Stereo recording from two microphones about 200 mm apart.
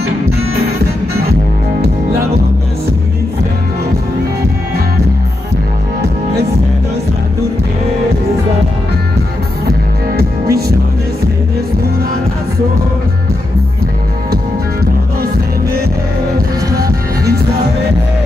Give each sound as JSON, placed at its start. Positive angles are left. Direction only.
{"t": 0.6, "sound": "music", "side_deg": -50}
{"t": 9.7, "sound": "music", "side_deg": -50}
{"t": 16.3, "sound": "music", "side_deg": -15}